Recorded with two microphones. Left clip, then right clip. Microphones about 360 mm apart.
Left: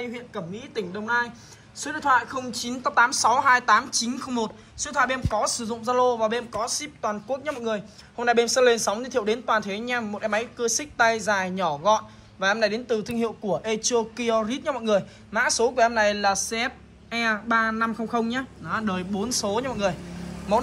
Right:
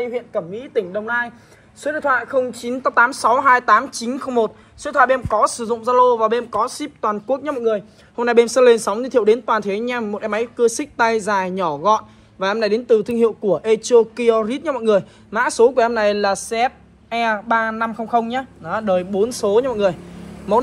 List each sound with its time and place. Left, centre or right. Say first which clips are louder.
0.3 s speech: right 11 dB; centre